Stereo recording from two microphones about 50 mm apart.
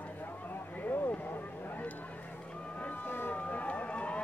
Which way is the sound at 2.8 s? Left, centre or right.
Left.